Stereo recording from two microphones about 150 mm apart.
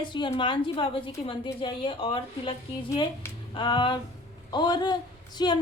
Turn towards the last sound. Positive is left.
turn(degrees=30)  # may be behind; listen again after turning